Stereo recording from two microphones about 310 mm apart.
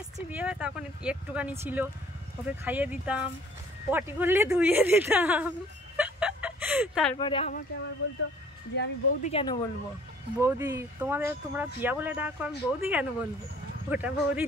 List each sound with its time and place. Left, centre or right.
0.3 s speech: centre
5.9 s a sound: centre
7.2 s speech: centre
8.0 s speech: left
9.3 s speech: centre
10.4 s speech: centre